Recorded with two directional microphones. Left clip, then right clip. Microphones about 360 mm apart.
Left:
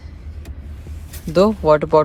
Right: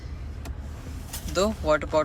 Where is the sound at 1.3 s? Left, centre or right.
Centre.